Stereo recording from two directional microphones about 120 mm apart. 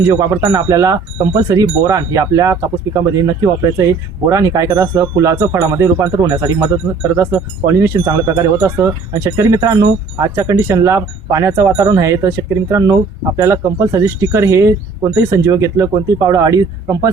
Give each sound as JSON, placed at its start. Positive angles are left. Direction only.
{"t": 0.1, "sound": "speech", "side_deg": -25}